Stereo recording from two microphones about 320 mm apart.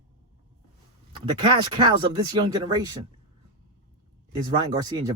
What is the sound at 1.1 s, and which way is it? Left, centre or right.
Speech, centre.